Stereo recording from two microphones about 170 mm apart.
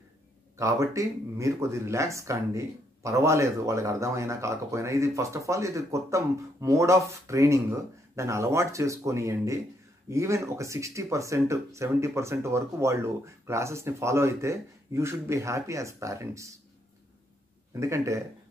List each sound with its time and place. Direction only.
0.6 s speech: 20° right (ahead or behind)
17.7 s speech: 15° right (ahead or behind)